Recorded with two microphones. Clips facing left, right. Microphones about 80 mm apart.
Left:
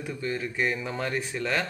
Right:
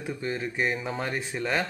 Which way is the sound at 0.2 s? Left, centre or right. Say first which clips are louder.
Left 1 dB; right.